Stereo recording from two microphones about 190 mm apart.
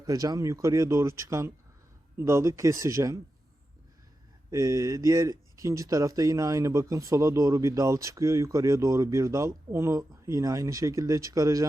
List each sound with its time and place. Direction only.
0.0 s speech: 20° right (ahead or behind)
4.5 s speech: 15° right (ahead or behind)